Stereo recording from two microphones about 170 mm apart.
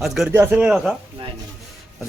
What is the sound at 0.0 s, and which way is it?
Speech, 5° right (ahead or behind).